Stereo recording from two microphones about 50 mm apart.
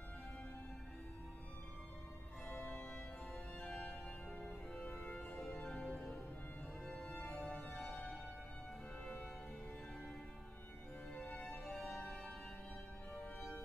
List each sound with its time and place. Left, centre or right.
2.4 s music: centre
11.3 s music: centre